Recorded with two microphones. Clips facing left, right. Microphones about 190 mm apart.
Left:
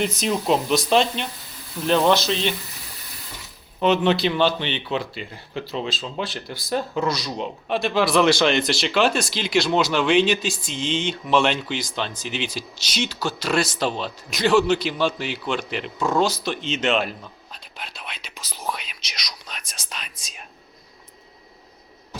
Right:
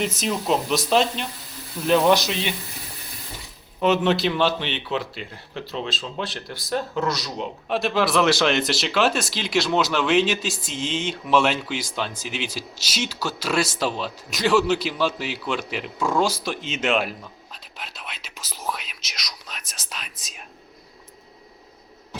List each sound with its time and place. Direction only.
0.2 s a man's voice: centre (ahead or behind)
1.9 s speech: 10° right (ahead or behind)
3.8 s a man's voice: 5° right (ahead or behind)